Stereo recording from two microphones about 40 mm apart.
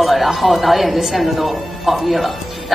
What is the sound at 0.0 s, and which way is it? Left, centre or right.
A woman's voice, centre.